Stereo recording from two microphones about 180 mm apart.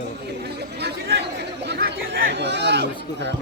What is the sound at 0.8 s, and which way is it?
Chatter, 65° right (ahead or behind).